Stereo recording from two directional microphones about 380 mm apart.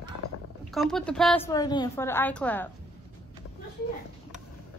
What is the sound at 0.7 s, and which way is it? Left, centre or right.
A woman's voice, centre.